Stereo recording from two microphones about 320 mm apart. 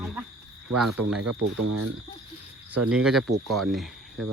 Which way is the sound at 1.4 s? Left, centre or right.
Right.